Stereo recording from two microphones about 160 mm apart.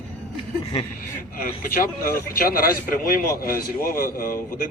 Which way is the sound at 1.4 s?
65° left (ahead or behind).